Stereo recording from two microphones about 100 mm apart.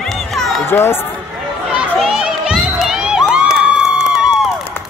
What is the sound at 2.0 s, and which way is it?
Crowd, 5° right (ahead or behind).